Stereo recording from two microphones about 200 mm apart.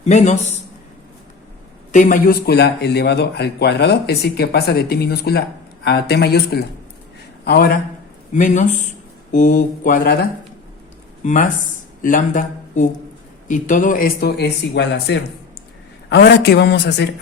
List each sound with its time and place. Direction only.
0.0 s speech: 35° left (ahead or behind)
1.9 s a man's voice: 40° left (ahead or behind)
8.3 s speech: 40° left (ahead or behind)
11.2 s a man's voice: 40° left (ahead or behind); by 17.1 s 60° left (ahead or behind)